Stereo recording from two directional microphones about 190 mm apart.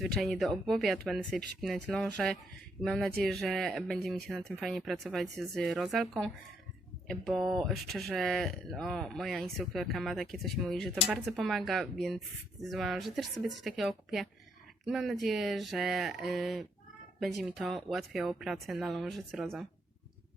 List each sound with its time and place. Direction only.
0.0 s speech: centre (ahead or behind)